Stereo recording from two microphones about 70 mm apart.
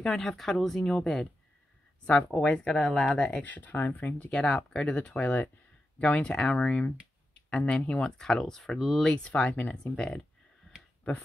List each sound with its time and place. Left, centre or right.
0.0 s speech: centre
9.0 s speech: centre